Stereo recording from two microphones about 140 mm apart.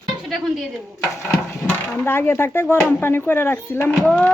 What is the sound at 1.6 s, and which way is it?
Speech, 15° left (ahead or behind).